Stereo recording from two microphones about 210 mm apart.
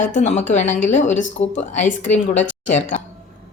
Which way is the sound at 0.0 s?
35° left (ahead or behind).